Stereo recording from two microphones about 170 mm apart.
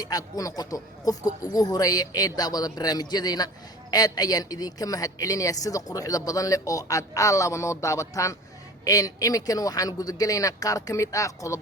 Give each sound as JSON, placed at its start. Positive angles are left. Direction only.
{"t": 0.0, "sound": "a woman's voice", "side_deg": 20}